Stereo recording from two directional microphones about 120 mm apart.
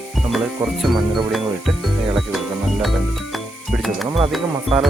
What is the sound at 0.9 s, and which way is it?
Speech, 40° right (ahead or behind).